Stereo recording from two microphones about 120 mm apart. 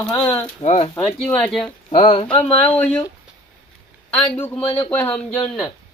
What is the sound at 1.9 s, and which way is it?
Speech, 50° left (ahead or behind).